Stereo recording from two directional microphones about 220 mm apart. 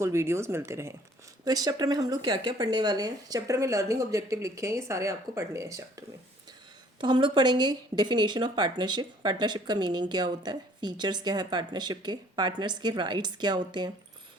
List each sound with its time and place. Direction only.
0.0 s speech: 10° right (ahead or behind)